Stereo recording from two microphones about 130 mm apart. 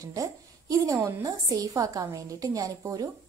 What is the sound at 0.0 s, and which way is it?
A woman's voice, 25° right (ahead or behind).